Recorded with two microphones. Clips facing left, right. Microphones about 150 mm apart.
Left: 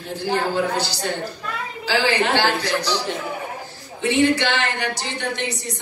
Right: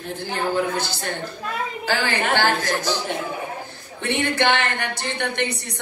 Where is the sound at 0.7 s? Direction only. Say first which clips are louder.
Left 2 dB; 50° right (ahead or behind).